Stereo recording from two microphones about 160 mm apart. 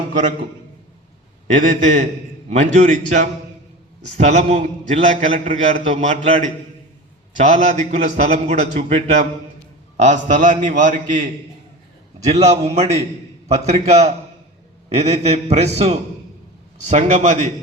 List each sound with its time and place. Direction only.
1.5 s a man's voice: 55° right (ahead or behind)
12.3 s a man's voice: 45° right (ahead or behind)